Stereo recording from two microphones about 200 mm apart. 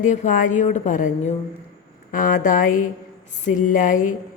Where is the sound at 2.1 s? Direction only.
45° left (ahead or behind).